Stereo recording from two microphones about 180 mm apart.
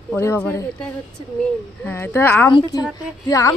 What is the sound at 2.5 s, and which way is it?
A man's voice, 25° left (ahead or behind).